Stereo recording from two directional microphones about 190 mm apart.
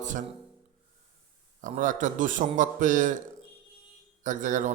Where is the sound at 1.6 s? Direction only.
40° right (ahead or behind).